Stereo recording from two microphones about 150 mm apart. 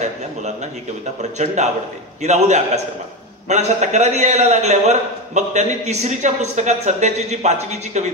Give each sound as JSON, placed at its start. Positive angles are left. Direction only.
{"t": 1.4, "sound": "a man's voice", "side_deg": -50}